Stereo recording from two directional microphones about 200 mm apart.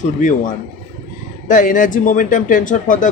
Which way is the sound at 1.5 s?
40° left (ahead or behind).